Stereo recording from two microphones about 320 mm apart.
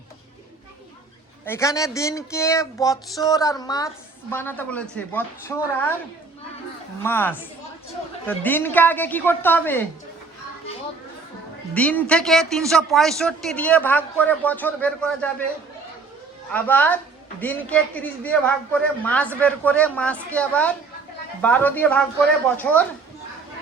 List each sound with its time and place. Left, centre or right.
1.5 s speech: centre
7.0 s a man's voice: centre
11.7 s a man's voice: centre
16.5 s a man's voice: centre